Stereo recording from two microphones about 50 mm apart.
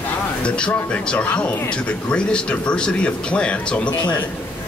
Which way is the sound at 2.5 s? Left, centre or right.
Left.